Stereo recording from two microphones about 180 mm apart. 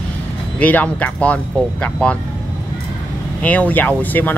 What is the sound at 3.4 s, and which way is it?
Speech, 10° left (ahead or behind).